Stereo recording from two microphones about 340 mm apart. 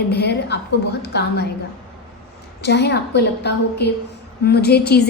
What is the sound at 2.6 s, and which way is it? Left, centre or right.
A woman's voice, left.